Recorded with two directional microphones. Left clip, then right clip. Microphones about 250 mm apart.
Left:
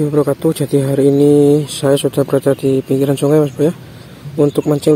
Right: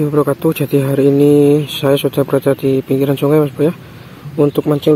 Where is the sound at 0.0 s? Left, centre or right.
Centre.